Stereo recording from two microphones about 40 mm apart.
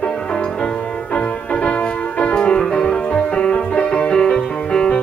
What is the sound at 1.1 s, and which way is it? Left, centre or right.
Music, left.